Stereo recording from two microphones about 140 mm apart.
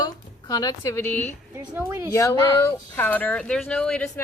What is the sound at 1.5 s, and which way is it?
Speech, 20° right (ahead or behind).